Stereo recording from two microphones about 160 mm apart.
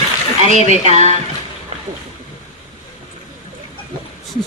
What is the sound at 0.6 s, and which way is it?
Speech, 45° right (ahead or behind).